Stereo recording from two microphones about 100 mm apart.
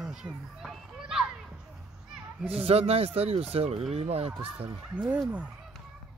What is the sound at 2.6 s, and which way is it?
Speech, 90° right.